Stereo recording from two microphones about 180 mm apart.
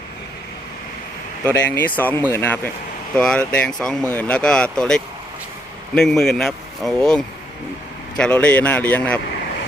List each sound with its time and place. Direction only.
1.5 s a man's voice: 10° left (ahead or behind)